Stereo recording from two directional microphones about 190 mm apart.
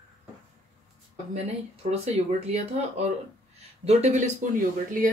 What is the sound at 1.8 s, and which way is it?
Speech, 35° right (ahead or behind).